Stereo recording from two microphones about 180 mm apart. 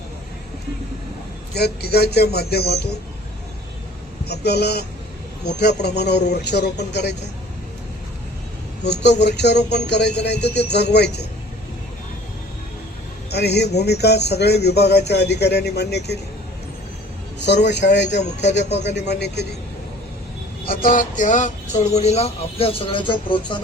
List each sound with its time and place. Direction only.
1.5 s speech: 65° left (ahead or behind)
4.3 s speech: 65° left (ahead or behind)
8.8 s speech: 70° left (ahead or behind)
13.3 s speech: 65° left (ahead or behind)
17.4 s speech: 70° left (ahead or behind)
20.7 s speech: 50° left (ahead or behind); by 23.6 s 25° left (ahead or behind)